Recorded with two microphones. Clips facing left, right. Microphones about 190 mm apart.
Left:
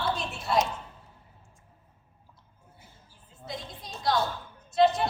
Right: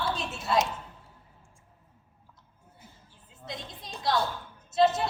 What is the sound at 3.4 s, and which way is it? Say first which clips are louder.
Speech: left 1 dB; centre (ahead or behind).